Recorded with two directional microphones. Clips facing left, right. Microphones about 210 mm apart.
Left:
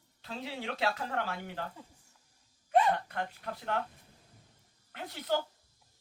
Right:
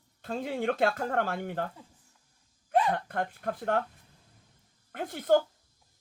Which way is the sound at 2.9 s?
50° right (ahead or behind).